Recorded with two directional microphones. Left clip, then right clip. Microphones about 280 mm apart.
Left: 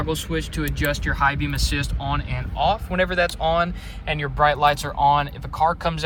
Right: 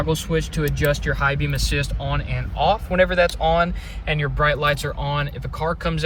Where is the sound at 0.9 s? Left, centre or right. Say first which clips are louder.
Left 1 dB; centre.